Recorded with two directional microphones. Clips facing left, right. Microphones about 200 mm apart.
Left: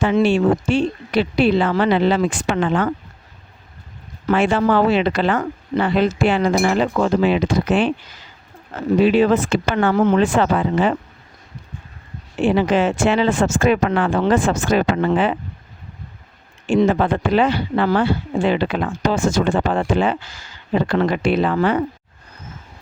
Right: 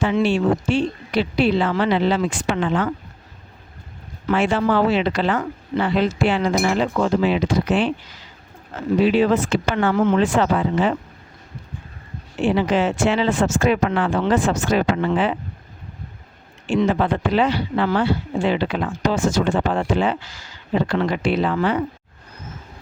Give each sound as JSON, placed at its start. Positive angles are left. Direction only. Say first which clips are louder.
{"t": 0.0, "sound": "speech", "louder": "left 3 dB", "side_deg": 55}
{"t": 4.3, "sound": "speech", "louder": "left 2 dB", "side_deg": 55}
{"t": 9.0, "sound": "speech", "louder": "left 2 dB", "side_deg": 50}
{"t": 9.9, "sound": "speech", "louder": "left 2 dB", "side_deg": 40}
{"t": 10.2, "sound": "speech", "louder": "left 2 dB", "side_deg": 55}
{"t": 12.4, "sound": "speech", "louder": "left 2 dB", "side_deg": 55}
{"t": 16.8, "sound": "speech", "louder": "left 1 dB", "side_deg": 50}